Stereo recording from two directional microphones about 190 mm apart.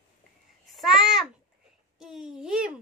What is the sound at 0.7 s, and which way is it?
Babbling, centre (ahead or behind).